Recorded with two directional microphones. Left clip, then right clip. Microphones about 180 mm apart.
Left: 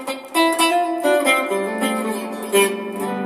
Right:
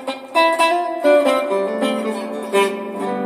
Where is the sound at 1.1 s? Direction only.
35° right (ahead or behind).